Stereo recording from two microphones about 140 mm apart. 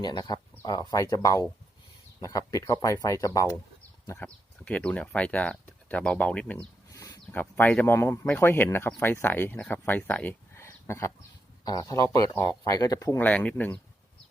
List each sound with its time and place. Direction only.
0.0 s speech: 30° left (ahead or behind)
4.2 s speech: 10° left (ahead or behind)
6.9 s a sound: 25° left (ahead or behind)
7.3 s speech: 10° left (ahead or behind)
13.1 s speech: 10° left (ahead or behind)